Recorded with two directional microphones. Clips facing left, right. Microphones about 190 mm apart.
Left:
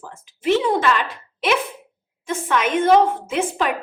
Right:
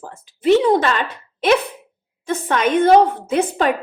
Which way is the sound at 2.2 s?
35° right (ahead or behind).